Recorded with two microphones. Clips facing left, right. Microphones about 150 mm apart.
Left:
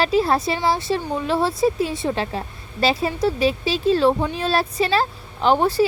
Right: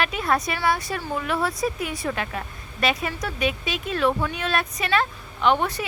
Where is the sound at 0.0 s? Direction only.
30° left (ahead or behind).